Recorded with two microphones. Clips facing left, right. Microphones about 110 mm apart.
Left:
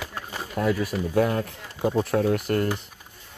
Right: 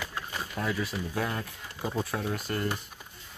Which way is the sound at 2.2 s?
60° left (ahead or behind).